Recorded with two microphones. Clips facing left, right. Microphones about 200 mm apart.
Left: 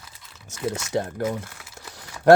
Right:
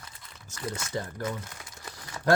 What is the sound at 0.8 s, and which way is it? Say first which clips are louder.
Speech: left 9 dB; 75° left (ahead or behind).